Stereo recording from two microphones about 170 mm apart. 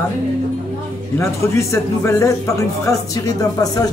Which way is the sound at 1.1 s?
15° left (ahead or behind).